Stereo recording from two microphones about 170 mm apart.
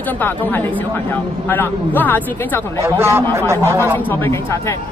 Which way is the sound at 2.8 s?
15° right (ahead or behind).